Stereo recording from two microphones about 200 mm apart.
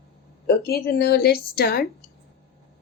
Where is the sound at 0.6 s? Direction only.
50° left (ahead or behind).